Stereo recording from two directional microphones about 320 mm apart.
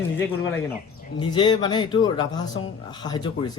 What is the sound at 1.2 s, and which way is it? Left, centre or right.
Speech, centre.